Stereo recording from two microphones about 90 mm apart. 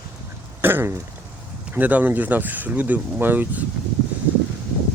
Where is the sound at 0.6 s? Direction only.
25° right (ahead or behind).